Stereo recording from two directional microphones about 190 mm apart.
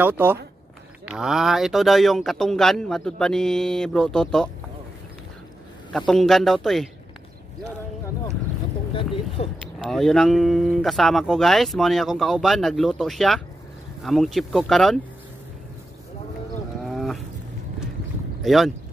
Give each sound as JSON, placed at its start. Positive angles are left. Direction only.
{"t": 0.0, "sound": "speech", "side_deg": -10}
{"t": 5.9, "sound": "speech", "side_deg": 0}
{"t": 8.9, "sound": "a sound", "side_deg": 30}
{"t": 9.8, "sound": "speech", "side_deg": 0}
{"t": 16.8, "sound": "wild animals", "side_deg": 0}
{"t": 18.4, "sound": "speech", "side_deg": 0}